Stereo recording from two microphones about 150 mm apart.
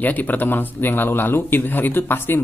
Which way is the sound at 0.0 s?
10° left (ahead or behind).